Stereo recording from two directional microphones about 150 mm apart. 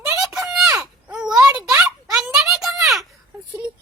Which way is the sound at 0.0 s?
15° right (ahead or behind).